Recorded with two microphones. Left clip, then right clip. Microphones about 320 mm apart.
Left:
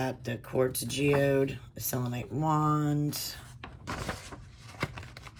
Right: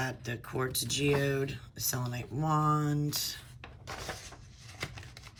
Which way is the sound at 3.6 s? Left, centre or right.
Left.